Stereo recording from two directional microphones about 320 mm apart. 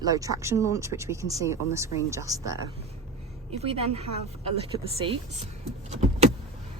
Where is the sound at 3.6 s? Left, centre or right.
Centre.